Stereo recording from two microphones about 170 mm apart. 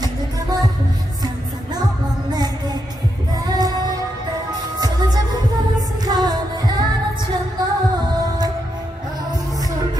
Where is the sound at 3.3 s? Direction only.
20° right (ahead or behind).